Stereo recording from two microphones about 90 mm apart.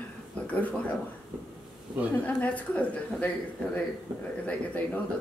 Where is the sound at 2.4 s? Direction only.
15° left (ahead or behind).